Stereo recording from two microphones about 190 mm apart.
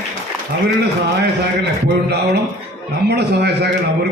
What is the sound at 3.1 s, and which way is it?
Speech, 60° right (ahead or behind).